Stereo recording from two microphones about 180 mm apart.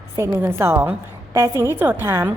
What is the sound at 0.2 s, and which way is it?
A woman's voice, 15° right (ahead or behind).